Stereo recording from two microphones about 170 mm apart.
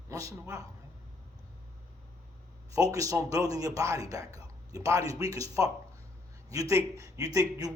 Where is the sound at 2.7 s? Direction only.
20° right (ahead or behind).